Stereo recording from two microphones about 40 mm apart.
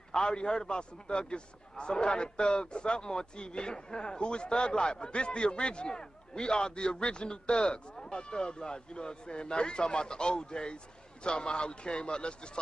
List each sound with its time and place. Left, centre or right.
0.1 s a man's voice: left